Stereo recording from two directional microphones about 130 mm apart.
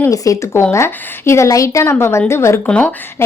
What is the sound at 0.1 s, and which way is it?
A woman's voice, 25° left (ahead or behind).